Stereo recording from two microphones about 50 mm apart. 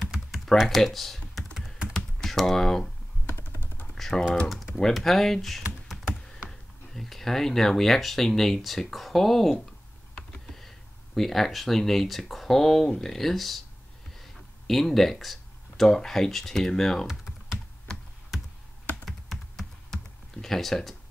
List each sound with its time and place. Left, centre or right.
0.6 s typing: centre
2.0 s computer keyboard: centre
3.9 s typing: centre
4.9 s speech: centre
6.9 s speech: centre
11.1 s speech: centre
14.1 s a sound: centre
15.8 s speech: centre
17.0 s typing: centre
17.9 s computer keyboard: centre
19.0 s computer keyboard: centre